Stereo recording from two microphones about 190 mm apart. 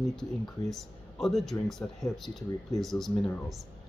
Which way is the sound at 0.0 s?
Centre (ahead or behind).